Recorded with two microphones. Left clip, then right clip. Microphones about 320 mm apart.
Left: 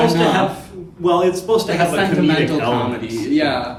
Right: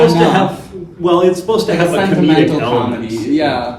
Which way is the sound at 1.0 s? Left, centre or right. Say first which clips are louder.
Right 4 dB; centre.